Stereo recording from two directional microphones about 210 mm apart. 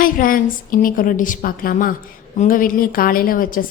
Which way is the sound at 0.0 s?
40° left (ahead or behind).